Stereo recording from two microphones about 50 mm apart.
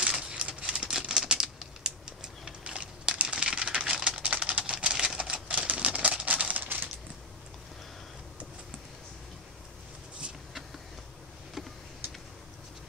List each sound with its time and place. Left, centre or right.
0.0 s crumpling: centre
0.7 s typing: centre
4.7 s typewriter: centre
5.7 s a sound: right
10.2 s vehicle: right